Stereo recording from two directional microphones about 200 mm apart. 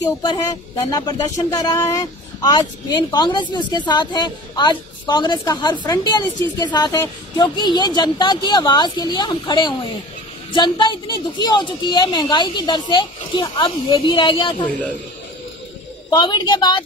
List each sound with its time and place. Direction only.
0.8 s a woman's voice: 20° left (ahead or behind)
16.1 s a woman's voice: 20° left (ahead or behind)